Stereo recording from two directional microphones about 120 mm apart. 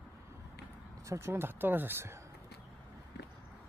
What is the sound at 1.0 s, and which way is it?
Speech, 25° right (ahead or behind).